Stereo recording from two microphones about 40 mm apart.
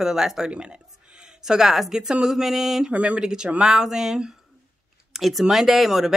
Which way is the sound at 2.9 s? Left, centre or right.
Right.